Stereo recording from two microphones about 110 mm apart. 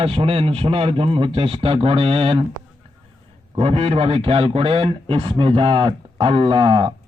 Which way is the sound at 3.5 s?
65° right (ahead or behind).